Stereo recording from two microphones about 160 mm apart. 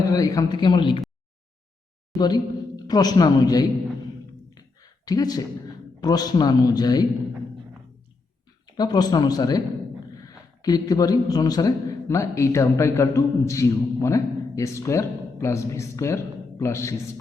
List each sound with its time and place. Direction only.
0.0 s a man's voice: 20° left (ahead or behind)
2.1 s a man's voice: 25° left (ahead or behind)
4.5 s a sound: 25° left (ahead or behind)
6.0 s a man's voice: 25° left (ahead or behind)
8.7 s a man's voice: 25° left (ahead or behind)